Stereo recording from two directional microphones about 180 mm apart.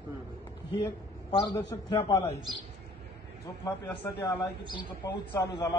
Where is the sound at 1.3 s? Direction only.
25° left (ahead or behind).